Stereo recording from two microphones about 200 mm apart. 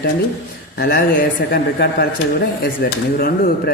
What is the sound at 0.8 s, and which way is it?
Speech, 50° left (ahead or behind).